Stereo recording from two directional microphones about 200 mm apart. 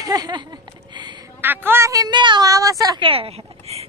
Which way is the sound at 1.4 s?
10° right (ahead or behind).